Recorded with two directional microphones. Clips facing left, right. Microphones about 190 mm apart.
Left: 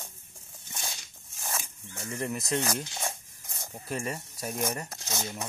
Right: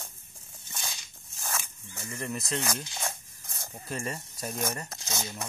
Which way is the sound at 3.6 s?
15° left (ahead or behind).